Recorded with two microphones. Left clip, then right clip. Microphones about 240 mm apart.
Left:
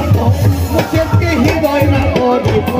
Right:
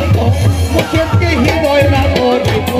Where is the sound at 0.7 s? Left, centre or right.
Left.